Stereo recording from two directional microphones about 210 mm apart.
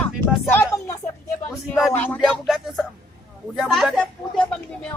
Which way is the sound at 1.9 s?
10° left (ahead or behind).